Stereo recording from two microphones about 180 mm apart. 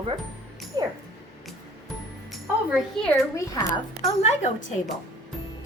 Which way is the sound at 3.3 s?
15° left (ahead or behind).